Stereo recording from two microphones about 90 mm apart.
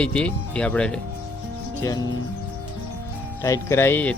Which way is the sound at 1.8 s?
40° left (ahead or behind).